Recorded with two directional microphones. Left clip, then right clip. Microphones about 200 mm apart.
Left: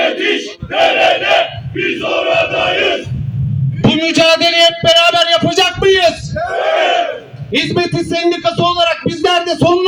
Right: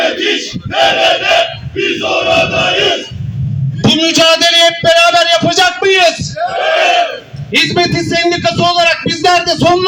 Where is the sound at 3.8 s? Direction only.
30° left (ahead or behind).